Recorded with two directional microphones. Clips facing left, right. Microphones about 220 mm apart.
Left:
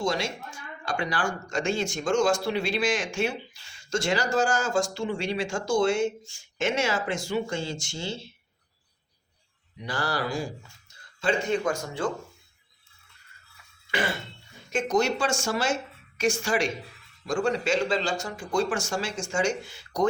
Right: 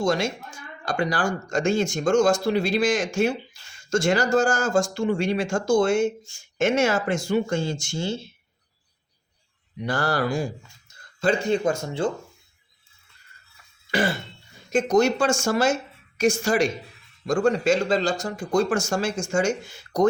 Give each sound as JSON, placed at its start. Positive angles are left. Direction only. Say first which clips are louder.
{"t": 0.0, "sound": "speech", "louder": "right 5 dB", "side_deg": -45}
{"t": 9.8, "sound": "speech", "louder": "right 5 dB", "side_deg": -50}
{"t": 11.2, "sound": "speech", "louder": "right 4 dB", "side_deg": -35}
{"t": 14.7, "sound": "speech", "louder": "right 5 dB", "side_deg": -40}